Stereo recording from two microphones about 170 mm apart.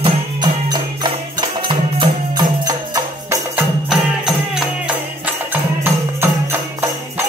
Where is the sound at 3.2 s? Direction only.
5° right (ahead or behind).